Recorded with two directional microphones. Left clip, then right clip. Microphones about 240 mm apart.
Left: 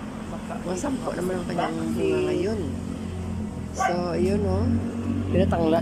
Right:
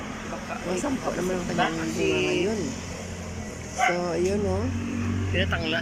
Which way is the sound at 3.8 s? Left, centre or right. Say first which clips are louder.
Even; centre.